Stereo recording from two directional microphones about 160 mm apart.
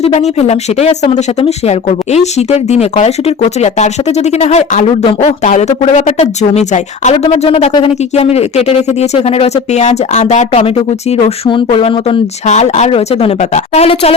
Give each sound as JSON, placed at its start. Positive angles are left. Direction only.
{"t": 0.0, "sound": "speech", "side_deg": 40}
{"t": 7.7, "sound": "speech", "side_deg": 30}
{"t": 8.1, "sound": "speech", "side_deg": 40}